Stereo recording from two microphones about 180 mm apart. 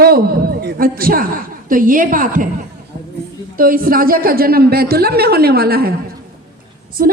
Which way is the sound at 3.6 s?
55° right (ahead or behind).